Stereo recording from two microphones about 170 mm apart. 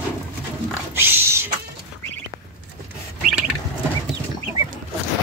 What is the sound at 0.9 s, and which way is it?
Roaring cats, 15° right (ahead or behind).